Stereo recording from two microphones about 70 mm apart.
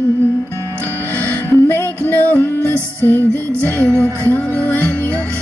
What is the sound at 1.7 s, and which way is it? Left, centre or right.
Music, left.